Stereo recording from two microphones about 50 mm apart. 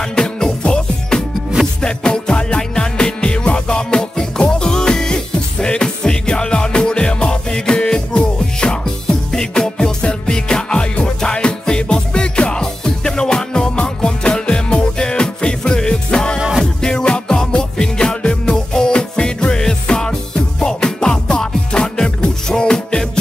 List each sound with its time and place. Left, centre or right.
0.0 s music: centre
16.3 s music: centre
16.8 s music: centre